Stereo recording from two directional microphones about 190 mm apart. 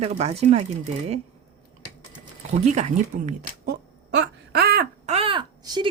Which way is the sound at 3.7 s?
60° right (ahead or behind).